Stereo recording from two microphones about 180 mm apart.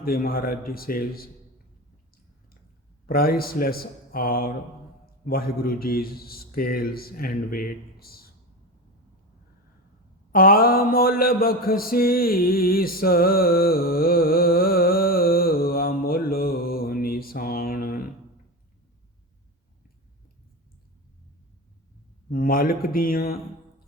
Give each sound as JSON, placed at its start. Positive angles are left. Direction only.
{"t": 0.0, "sound": "a man's voice", "side_deg": 55}
{"t": 3.1, "sound": "a man's voice", "side_deg": 55}
{"t": 10.3, "sound": "mantra", "side_deg": 55}
{"t": 22.3, "sound": "speech", "side_deg": 55}